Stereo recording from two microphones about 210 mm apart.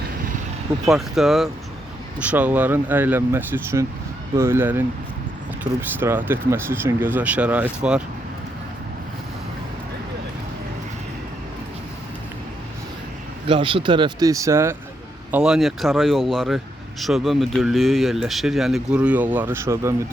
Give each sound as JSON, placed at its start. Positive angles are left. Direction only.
{"t": 0.9, "sound": "speech", "side_deg": 0}
{"t": 6.0, "sound": "speech", "side_deg": -10}
{"t": 13.5, "sound": "speech", "side_deg": -25}